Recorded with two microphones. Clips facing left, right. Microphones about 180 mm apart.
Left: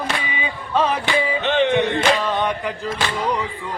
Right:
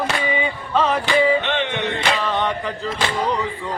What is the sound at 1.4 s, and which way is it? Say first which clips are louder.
Music: left 4 dB; 40° left (ahead or behind).